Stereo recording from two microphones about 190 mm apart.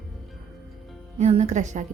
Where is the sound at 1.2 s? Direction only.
35° right (ahead or behind).